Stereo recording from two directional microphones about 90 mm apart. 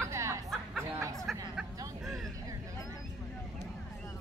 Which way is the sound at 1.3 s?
5° right (ahead or behind).